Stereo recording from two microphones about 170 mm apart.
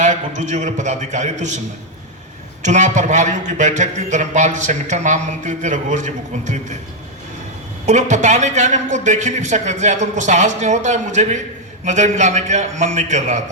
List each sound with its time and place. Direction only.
0.0 s a man's voice: 45° right (ahead or behind)
2.6 s a man's voice: 45° right (ahead or behind)
7.9 s a man's voice: 45° right (ahead or behind)